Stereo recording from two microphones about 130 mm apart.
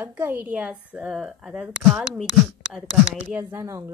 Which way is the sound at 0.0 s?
15° right (ahead or behind).